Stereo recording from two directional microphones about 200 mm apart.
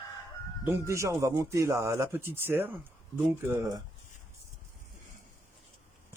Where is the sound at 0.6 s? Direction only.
15° right (ahead or behind).